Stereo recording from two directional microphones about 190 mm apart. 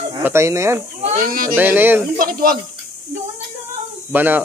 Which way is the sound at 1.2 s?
50° right (ahead or behind).